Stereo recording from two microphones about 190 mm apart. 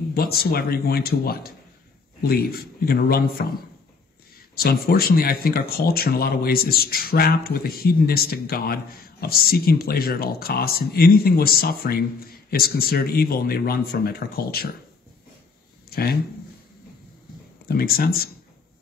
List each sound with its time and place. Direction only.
0.1 s speech: 50° left (ahead or behind)
4.6 s speech: 55° left (ahead or behind)
15.9 s speech: 55° left (ahead or behind)
17.6 s speech: 55° left (ahead or behind)